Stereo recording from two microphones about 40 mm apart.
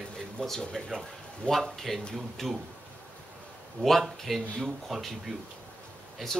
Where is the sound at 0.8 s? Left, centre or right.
Centre.